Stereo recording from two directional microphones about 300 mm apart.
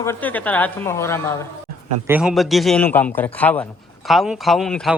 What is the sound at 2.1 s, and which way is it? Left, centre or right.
A man's voice, centre.